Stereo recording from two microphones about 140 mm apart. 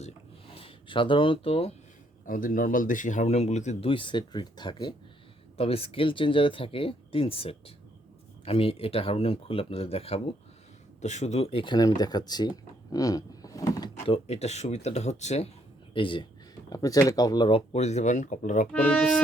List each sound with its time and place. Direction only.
0.0 s a sound: 40° left (ahead or behind)
2.2 s a man's voice: 80° left; by 3.8 s 55° left (ahead or behind)
3.8 s speech: 35° left (ahead or behind)
5.5 s speech: 45° left (ahead or behind)
12.9 s a sound: 25° left (ahead or behind)
14.0 s speech: 45° left (ahead or behind)
15.9 s speech: 35° left (ahead or behind)
16.6 s speech: 25° left (ahead or behind)
17.7 s speech: 50° left (ahead or behind)
18.7 s speech: 10° left (ahead or behind)